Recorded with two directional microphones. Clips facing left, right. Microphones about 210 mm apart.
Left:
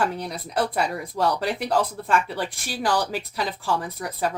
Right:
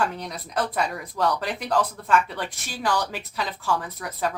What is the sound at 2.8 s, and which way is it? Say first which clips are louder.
Speech: left 2 dB; 30° left (ahead or behind).